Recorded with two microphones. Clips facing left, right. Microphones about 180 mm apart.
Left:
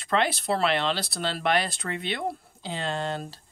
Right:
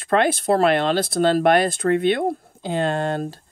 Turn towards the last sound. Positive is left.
turn(degrees=-55)  # may be behind; listen again after turning